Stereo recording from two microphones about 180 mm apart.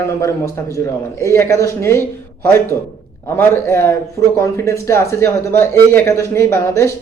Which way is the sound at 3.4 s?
15° left (ahead or behind).